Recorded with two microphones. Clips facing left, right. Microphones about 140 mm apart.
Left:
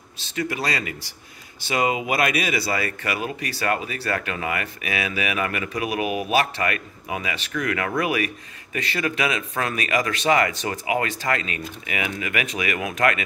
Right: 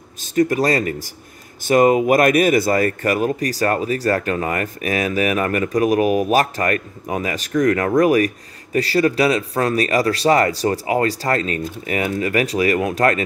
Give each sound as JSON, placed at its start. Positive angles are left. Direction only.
{"t": 0.2, "sound": "speech", "side_deg": -45}